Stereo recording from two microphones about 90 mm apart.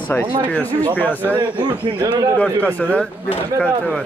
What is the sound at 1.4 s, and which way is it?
Speech, 55° right (ahead or behind).